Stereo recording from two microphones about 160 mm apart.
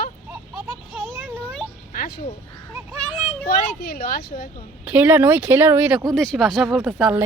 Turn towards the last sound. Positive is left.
turn(degrees=-5)  # may be behind; listen again after turning